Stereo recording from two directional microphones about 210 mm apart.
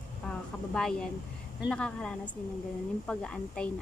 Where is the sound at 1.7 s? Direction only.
5° left (ahead or behind).